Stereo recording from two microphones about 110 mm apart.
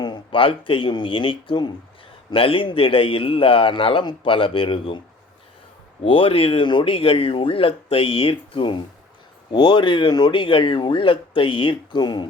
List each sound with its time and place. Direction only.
0.0 s speech: 45° left (ahead or behind)
6.0 s speech: 55° left (ahead or behind)